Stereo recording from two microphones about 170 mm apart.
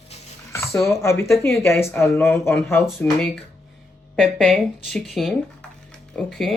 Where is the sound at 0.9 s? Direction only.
15° left (ahead or behind).